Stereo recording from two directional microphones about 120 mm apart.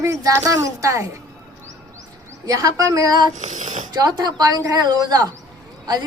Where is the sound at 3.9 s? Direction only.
35° right (ahead or behind).